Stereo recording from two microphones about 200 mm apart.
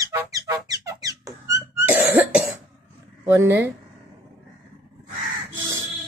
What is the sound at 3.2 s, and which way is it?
Speech, 10° right (ahead or behind).